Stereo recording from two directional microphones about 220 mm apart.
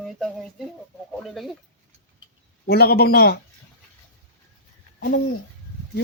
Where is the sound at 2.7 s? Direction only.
45° left (ahead or behind).